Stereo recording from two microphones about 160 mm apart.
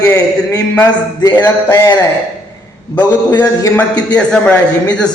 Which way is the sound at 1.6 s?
15° left (ahead or behind).